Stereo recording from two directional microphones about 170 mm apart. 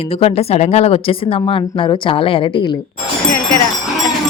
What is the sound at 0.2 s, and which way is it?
Speech, 40° left (ahead or behind).